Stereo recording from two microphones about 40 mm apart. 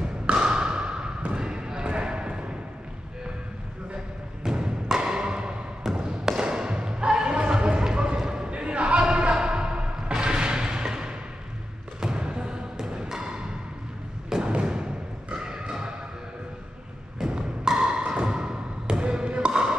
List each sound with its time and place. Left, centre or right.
0.0 s basketball bounce: right
4.4 s music: centre
5.0 s music: right
5.9 s a sound: right
10.1 s music: right
12.2 s music: right
14.3 s thump: right
17.3 s thump: right
18.5 s music: right